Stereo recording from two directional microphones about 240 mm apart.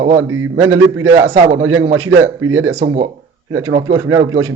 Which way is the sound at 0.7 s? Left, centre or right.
Right.